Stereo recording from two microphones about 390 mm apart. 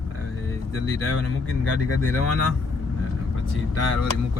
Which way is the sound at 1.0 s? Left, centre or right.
Left.